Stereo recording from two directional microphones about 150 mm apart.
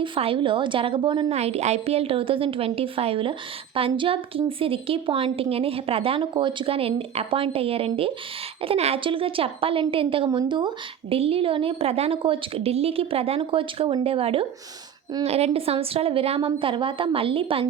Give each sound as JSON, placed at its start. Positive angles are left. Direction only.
{"t": 0.0, "sound": "a woman's voice", "side_deg": -35}